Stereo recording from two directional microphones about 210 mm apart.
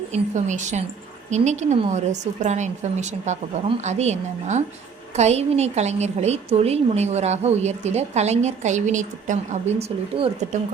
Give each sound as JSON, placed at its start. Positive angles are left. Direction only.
{"t": 0.1, "sound": "a woman's voice", "side_deg": -35}